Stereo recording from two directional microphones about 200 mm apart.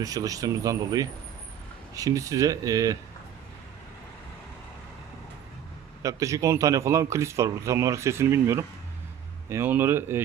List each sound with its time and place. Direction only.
0.0 s a man's voice: 15° right (ahead or behind)
6.0 s a man's voice: 15° right (ahead or behind)